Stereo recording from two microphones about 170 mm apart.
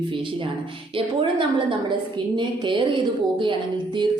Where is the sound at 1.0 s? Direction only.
30° right (ahead or behind).